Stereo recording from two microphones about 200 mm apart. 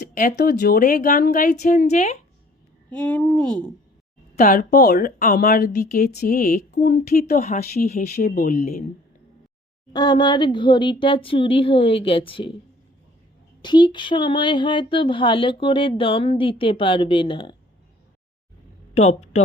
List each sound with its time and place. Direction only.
0.0 s speech: 45° left (ahead or behind)
2.9 s speech: 5° left (ahead or behind)
4.4 s speech: 45° left (ahead or behind)
9.9 s a sound: 20° left (ahead or behind)
13.6 s a sound: 20° left (ahead or behind)
18.9 s speech: 30° left (ahead or behind)